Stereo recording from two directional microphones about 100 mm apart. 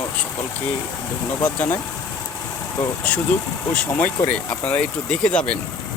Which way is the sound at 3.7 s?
15° left (ahead or behind).